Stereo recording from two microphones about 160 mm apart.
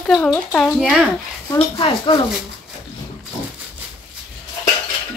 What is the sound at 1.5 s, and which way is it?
Speech, 35° left (ahead or behind).